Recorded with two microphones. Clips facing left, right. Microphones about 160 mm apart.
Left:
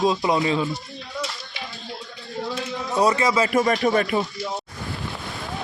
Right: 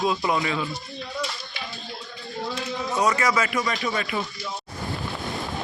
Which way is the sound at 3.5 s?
45° left (ahead or behind).